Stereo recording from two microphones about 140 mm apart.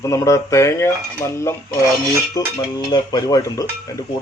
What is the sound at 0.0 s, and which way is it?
Cutlery, 20° left (ahead or behind).